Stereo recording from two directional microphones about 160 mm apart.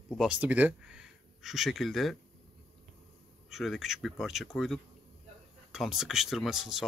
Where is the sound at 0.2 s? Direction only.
10° right (ahead or behind).